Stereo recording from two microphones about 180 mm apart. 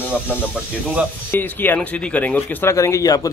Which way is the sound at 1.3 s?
10° left (ahead or behind).